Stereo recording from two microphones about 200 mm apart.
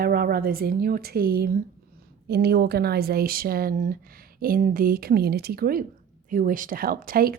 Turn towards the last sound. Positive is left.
turn(degrees=-45)  # may be behind; listen again after turning